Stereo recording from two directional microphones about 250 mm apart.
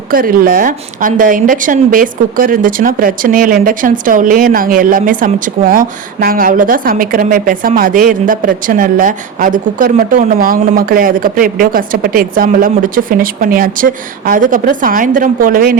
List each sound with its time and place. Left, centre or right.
0.1 s a woman's voice: right